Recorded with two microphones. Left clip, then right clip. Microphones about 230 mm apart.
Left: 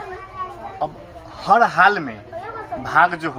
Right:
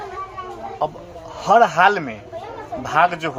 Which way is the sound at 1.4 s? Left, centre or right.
Centre.